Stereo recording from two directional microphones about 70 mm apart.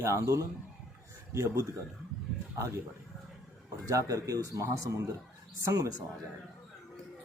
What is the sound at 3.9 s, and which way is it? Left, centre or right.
Speech, right.